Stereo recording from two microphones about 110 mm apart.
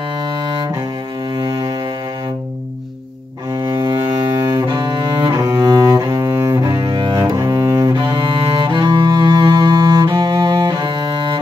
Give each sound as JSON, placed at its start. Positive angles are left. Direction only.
{"t": 1.4, "sound": "cello", "side_deg": -40}
{"t": 3.5, "sound": "cello", "side_deg": -35}
{"t": 4.0, "sound": "cello", "side_deg": -25}